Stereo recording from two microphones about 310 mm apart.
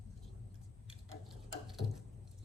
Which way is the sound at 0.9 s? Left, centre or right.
Centre.